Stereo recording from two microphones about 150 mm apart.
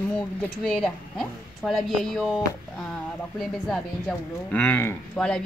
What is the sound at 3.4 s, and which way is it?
Speech, centre (ahead or behind).